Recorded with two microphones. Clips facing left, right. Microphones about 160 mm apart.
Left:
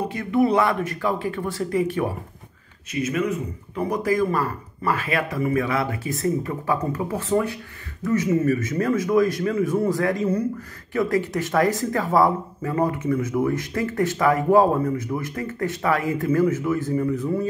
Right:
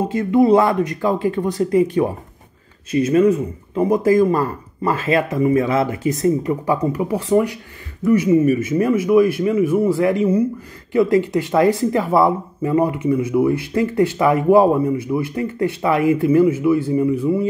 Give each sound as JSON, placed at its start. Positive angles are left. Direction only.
{"t": 0.0, "sound": "speech", "side_deg": -25}